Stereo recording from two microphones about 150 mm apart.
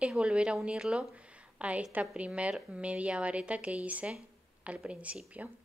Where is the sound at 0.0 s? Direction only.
5° right (ahead or behind).